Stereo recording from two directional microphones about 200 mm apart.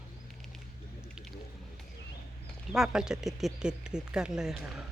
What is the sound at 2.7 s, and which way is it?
Speech, centre (ahead or behind).